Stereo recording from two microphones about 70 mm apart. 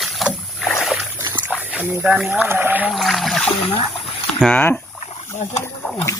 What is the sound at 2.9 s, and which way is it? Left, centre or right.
Boat, centre.